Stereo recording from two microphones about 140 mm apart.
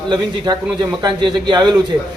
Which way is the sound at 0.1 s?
30° right (ahead or behind).